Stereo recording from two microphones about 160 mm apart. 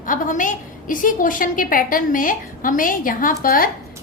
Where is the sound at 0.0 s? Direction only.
55° left (ahead or behind).